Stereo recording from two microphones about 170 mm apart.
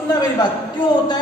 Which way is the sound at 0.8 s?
25° left (ahead or behind).